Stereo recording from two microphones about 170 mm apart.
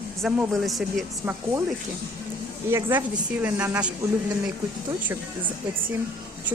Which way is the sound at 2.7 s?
10° right (ahead or behind).